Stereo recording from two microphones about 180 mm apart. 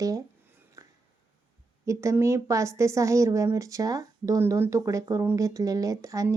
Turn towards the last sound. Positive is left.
turn(degrees=-20)  # may be behind; listen again after turning